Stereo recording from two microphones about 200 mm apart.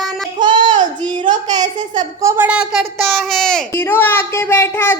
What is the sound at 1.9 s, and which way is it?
A woman's voice, 20° right (ahead or behind).